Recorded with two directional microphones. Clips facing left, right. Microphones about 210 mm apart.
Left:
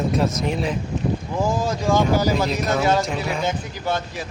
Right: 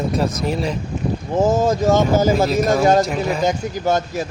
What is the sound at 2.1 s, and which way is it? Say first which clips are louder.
Speech: right 5 dB; 45° right (ahead or behind).